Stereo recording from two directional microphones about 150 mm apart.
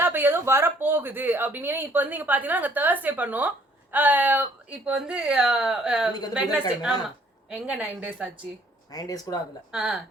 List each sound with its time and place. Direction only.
0.0 s speech: 15° right (ahead or behind)
8.9 s speech: 25° left (ahead or behind)
9.7 s speech: 5° right (ahead or behind)